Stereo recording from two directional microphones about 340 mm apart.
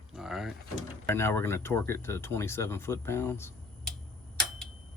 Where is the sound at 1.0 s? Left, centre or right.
Centre.